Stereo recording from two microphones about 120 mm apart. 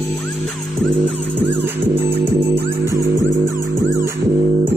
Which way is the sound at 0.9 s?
15° right (ahead or behind).